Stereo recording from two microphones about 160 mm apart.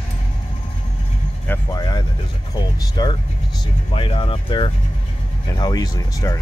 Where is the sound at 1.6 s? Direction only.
25° left (ahead or behind).